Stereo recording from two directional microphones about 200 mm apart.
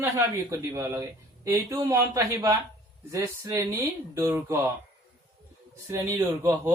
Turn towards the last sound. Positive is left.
turn(degrees=-15)  # may be behind; listen again after turning